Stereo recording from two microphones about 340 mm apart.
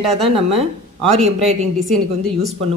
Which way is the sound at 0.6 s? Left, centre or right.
Centre.